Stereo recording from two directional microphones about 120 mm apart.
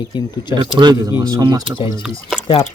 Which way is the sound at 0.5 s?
35° right (ahead or behind).